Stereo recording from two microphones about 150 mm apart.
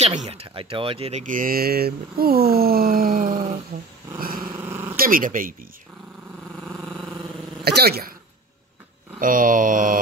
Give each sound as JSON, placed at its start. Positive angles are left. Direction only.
{"t": 0.0, "sound": "speech", "side_deg": -50}
{"t": 1.2, "sound": "speech", "side_deg": -65}
{"t": 4.6, "sound": "dog", "side_deg": -15}
{"t": 4.9, "sound": "speech", "side_deg": -70}
{"t": 7.6, "sound": "speech", "side_deg": -90}
{"t": 9.2, "sound": "speech", "side_deg": -65}